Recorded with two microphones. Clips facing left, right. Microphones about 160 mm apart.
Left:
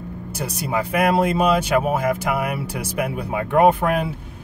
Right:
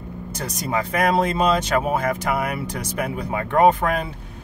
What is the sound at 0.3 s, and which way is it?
Speech, 10° left (ahead or behind).